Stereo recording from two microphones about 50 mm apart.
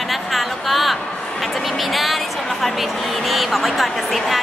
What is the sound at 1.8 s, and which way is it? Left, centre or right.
A woman's voice, centre.